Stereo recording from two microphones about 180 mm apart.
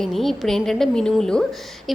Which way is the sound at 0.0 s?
Centre (ahead or behind).